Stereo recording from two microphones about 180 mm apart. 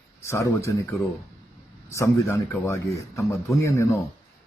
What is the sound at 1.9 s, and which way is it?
Speech, 15° left (ahead or behind).